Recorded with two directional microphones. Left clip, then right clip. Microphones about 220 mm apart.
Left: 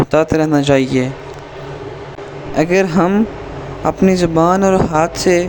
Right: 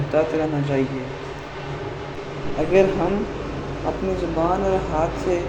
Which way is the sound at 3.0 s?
45° left (ahead or behind).